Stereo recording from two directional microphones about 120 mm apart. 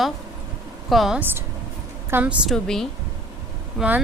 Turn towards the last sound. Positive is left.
turn(degrees=0)  # may be behind; listen again after turning